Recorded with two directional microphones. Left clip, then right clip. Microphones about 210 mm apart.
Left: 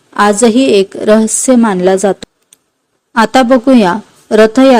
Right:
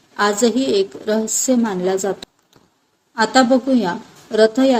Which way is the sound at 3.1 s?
50° left (ahead or behind).